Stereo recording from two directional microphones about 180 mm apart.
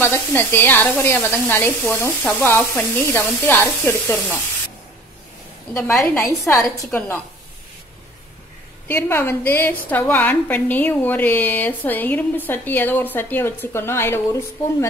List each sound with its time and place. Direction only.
0.0 s a woman's voice: 10° left (ahead or behind)
5.7 s a woman's voice: 15° left (ahead or behind)
8.8 s a woman's voice: 10° left (ahead or behind)